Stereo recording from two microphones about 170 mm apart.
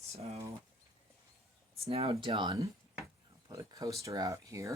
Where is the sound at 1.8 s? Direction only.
35° right (ahead or behind).